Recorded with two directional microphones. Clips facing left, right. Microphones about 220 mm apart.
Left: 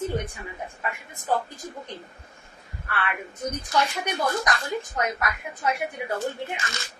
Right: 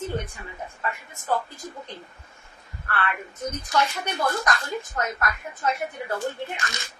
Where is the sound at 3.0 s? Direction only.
15° left (ahead or behind).